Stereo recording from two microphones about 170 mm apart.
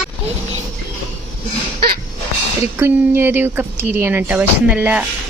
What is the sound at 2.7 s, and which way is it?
Speech, 10° right (ahead or behind).